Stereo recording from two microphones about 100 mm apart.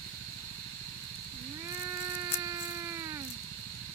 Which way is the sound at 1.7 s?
35° right (ahead or behind).